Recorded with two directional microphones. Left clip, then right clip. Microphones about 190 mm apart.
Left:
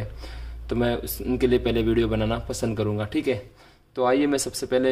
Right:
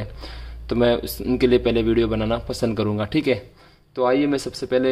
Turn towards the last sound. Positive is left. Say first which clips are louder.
# right 2 dB
turn(degrees=-10)  # may be behind; listen again after turning